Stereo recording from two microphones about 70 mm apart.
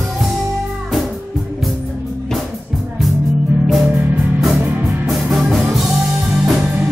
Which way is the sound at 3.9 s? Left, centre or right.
Right.